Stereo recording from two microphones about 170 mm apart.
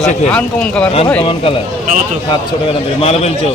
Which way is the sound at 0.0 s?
5° left (ahead or behind).